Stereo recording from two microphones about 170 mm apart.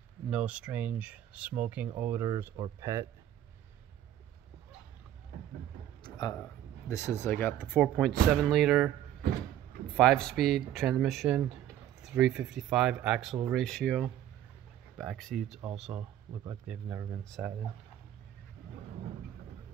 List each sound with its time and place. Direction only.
0.3 s speech: 5° right (ahead or behind)
6.0 s a sound: 25° left (ahead or behind)
6.9 s speech: 15° left (ahead or behind); by 8.9 s centre (ahead or behind)
9.9 s speech: 5° left (ahead or behind); by 17.2 s 15° right (ahead or behind)
17.2 s speech: centre (ahead or behind)